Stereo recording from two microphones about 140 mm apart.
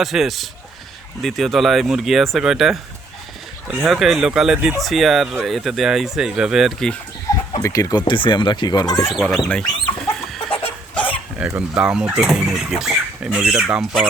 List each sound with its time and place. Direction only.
0.0 s speech: centre (ahead or behind)
3.8 s speech: centre (ahead or behind)
7.3 s speech: 25° left (ahead or behind)
9.0 s speech: centre (ahead or behind)
11.3 s speech: 5° right (ahead or behind)